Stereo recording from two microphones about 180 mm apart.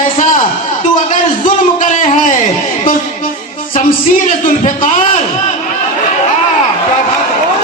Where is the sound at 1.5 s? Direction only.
45° left (ahead or behind).